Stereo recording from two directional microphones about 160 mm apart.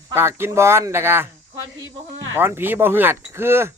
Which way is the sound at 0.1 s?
15° right (ahead or behind).